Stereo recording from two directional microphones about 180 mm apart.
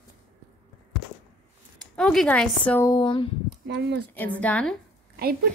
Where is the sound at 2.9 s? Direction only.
25° left (ahead or behind).